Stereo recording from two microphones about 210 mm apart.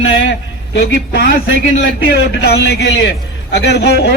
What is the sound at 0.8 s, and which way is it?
A man's voice, 50° left (ahead or behind).